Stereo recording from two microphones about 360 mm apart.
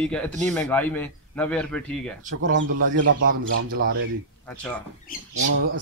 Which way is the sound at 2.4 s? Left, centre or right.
Right.